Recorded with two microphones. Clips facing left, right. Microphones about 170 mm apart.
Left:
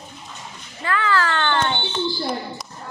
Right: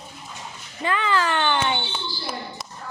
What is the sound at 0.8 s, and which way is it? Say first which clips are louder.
A child's voice: left 1 dB; 20° right (ahead or behind).